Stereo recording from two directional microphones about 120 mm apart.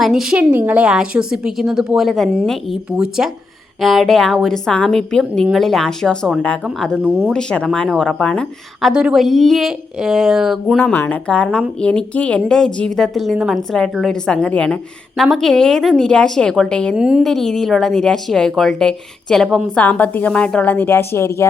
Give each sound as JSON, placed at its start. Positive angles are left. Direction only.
{"t": 0.0, "sound": "a woman's voice", "side_deg": -5}
{"t": 0.5, "sound": "a woman's voice", "side_deg": -15}
{"t": 6.9, "sound": "a woman's voice", "side_deg": -10}
{"t": 7.3, "sound": "a woman's voice", "side_deg": 5}
{"t": 8.9, "sound": "a woman's voice", "side_deg": -5}
{"t": 10.9, "sound": "speech", "side_deg": 20}
{"t": 11.3, "sound": "a woman's voice", "side_deg": 10}
{"t": 17.0, "sound": "a woman's voice", "side_deg": -5}
{"t": 17.2, "sound": "a woman's voice", "side_deg": 5}